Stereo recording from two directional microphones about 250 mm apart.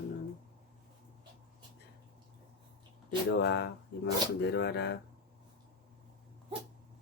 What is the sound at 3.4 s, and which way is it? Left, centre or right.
Speech, left.